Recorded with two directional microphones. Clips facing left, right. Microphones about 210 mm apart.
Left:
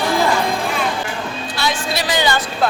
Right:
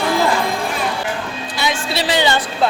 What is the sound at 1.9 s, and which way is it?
Speech, 30° right (ahead or behind).